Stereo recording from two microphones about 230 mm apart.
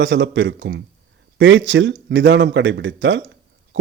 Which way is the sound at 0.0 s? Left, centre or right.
Right.